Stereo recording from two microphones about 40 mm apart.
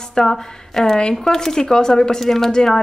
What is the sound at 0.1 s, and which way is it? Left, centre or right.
Speech, centre.